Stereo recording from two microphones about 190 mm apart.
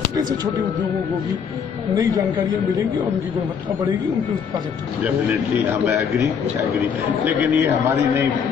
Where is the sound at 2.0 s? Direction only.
20° right (ahead or behind).